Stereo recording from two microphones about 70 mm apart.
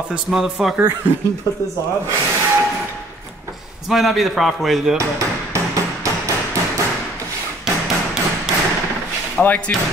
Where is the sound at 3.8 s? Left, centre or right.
Centre.